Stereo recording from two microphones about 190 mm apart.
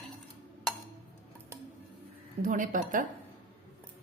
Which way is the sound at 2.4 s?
40° right (ahead or behind).